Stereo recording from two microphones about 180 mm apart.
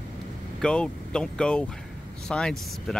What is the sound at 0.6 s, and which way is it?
Speech, 5° left (ahead or behind).